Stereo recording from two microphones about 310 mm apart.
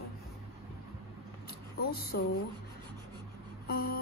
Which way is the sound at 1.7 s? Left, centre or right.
Left.